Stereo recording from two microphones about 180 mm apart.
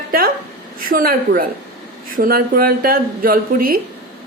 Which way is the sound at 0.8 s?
55° right (ahead or behind).